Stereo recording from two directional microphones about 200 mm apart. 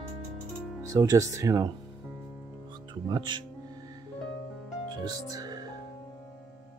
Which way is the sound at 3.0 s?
20° right (ahead or behind).